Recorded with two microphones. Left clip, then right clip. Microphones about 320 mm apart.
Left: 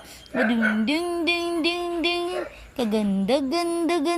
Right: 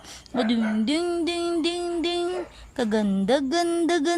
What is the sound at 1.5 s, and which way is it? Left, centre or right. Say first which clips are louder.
Music: left 1 dB; right.